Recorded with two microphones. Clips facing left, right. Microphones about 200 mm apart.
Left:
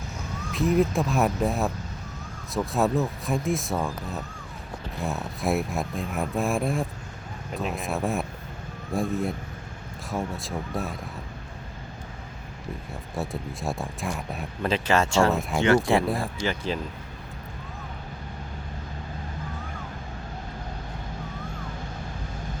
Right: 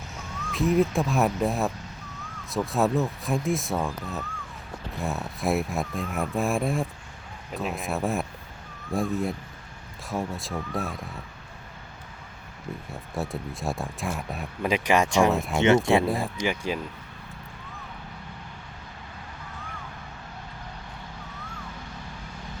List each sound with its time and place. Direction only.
0.5 s speech: centre (ahead or behind)
12.9 s speech: centre (ahead or behind)
14.6 s speech: 15° right (ahead or behind)
15.3 s speech: centre (ahead or behind)
15.6 s speech: 20° right (ahead or behind)
16.0 s speech: centre (ahead or behind)
16.4 s speech: 10° right (ahead or behind)